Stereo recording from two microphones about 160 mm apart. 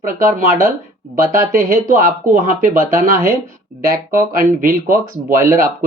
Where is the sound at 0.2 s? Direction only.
60° right (ahead or behind).